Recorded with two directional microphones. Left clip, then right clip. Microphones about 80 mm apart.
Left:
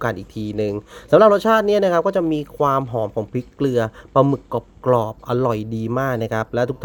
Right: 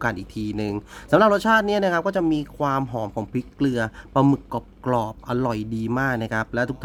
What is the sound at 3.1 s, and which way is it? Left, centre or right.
Speech, left.